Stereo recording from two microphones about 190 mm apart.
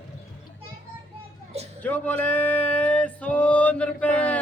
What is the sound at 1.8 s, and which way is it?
Male singing, 10° left (ahead or behind).